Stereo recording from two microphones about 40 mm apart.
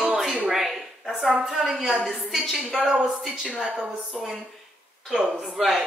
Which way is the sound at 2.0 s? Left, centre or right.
Centre.